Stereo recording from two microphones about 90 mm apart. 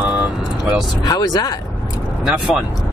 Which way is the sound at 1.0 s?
45° left (ahead or behind).